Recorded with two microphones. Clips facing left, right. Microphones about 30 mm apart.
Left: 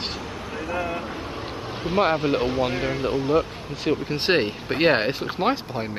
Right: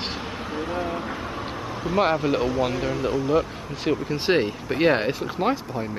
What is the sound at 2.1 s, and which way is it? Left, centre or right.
Speech, left.